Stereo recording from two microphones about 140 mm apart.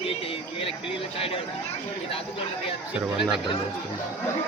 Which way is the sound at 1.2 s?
40° left (ahead or behind).